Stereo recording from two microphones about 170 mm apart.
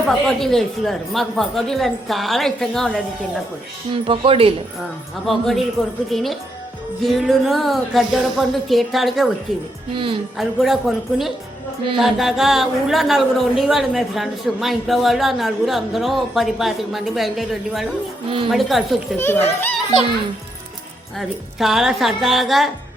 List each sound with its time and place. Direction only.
0.1 s speech: 5° left (ahead or behind)
3.9 s speech: 30° right (ahead or behind)
5.2 s speech: centre (ahead or behind)
9.9 s speech: 30° right (ahead or behind)
10.3 s speech: centre (ahead or behind)
18.3 s speech: 30° right (ahead or behind)
18.5 s speech: centre (ahead or behind)
19.1 s speech: 15° left (ahead or behind)
21.2 s speech: centre (ahead or behind)